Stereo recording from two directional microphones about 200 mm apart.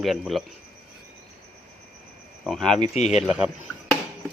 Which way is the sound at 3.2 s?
5° right (ahead or behind).